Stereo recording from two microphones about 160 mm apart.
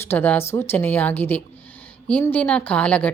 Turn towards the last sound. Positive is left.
turn(degrees=10)  # may be behind; listen again after turning